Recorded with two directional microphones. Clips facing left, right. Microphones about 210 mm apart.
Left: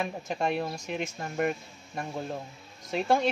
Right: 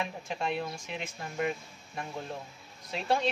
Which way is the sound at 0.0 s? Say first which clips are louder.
Left 4 dB; 45° left (ahead or behind).